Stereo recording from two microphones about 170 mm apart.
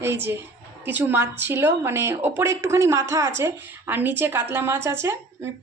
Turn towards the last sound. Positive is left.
turn(degrees=-15)  # may be behind; listen again after turning